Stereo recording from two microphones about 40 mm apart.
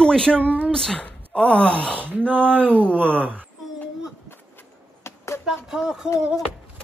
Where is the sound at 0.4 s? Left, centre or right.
Right.